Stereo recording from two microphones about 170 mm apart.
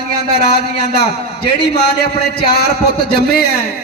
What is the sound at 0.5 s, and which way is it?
A man's voice, 75° left (ahead or behind).